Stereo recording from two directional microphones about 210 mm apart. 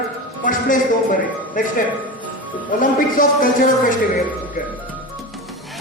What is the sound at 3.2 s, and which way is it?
Speech, 40° left (ahead or behind).